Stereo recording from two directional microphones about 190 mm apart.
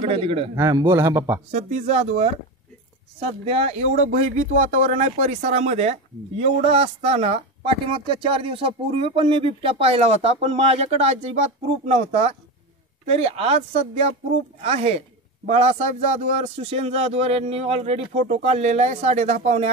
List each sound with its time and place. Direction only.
0.0 s a man's voice: 30° right (ahead or behind)
0.6 s a man's voice: 15° right (ahead or behind)
1.5 s speech: 40° right (ahead or behind)